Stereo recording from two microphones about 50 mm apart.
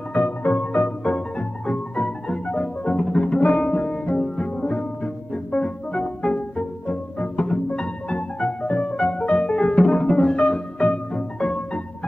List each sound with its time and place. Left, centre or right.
0.1 s music: left
0.7 s organ: left
2.0 s music: centre
10.9 s music: left